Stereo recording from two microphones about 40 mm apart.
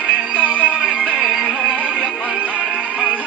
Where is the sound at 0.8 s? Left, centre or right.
Right.